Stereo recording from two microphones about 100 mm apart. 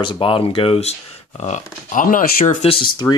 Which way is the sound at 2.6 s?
90° left.